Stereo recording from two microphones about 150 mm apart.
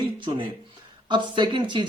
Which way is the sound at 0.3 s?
35° right (ahead or behind).